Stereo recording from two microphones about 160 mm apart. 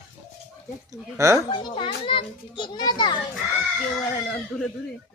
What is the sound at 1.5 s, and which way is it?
A child's voice, 30° left (ahead or behind).